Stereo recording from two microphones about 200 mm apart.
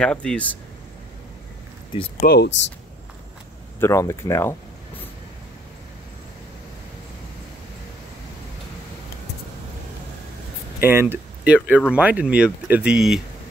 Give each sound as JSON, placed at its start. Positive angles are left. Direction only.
{"t": 0.0, "sound": "speech", "side_deg": 5}
{"t": 2.2, "sound": "speech", "side_deg": 55}
{"t": 3.8, "sound": "speech", "side_deg": 15}
{"t": 10.8, "sound": "speech", "side_deg": -10}